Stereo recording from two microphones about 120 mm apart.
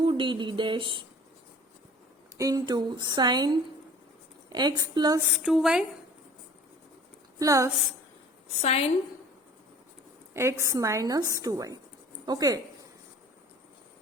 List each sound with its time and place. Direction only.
0.0 s a sound: 45° right (ahead or behind)
2.4 s speech: 30° right (ahead or behind)
5.3 s speech: 5° right (ahead or behind)
7.3 s a woman's voice: 25° right (ahead or behind)
8.6 s a woman's voice: 60° left (ahead or behind)
10.3 s a woman's voice: 25° right (ahead or behind)